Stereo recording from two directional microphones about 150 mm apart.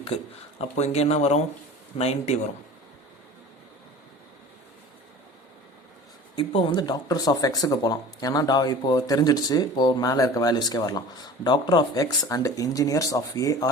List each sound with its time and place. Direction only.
0.8 s speech: 45° left (ahead or behind)
6.3 s speech: 35° left (ahead or behind)